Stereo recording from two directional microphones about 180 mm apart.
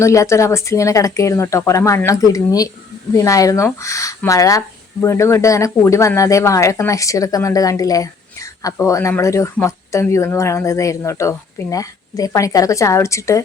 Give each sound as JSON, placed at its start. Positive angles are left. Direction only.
{"t": 0.0, "sound": "speech", "side_deg": 15}